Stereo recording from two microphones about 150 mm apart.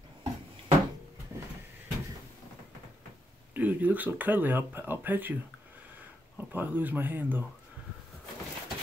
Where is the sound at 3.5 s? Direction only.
10° right (ahead or behind).